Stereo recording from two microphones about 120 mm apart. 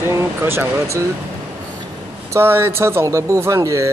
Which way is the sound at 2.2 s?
20° right (ahead or behind).